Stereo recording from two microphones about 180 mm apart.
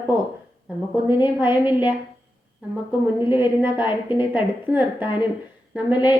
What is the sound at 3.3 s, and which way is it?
A woman's voice, 10° right (ahead or behind).